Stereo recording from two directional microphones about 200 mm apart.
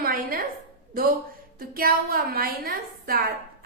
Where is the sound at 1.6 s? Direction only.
45° right (ahead or behind).